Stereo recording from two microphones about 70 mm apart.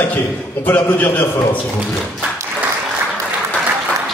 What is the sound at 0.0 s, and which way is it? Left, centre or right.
A man's voice, left.